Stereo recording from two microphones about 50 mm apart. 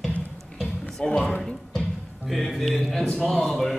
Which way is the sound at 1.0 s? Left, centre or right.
Left.